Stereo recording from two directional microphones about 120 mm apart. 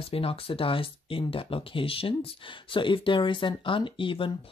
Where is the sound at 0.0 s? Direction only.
50° left (ahead or behind).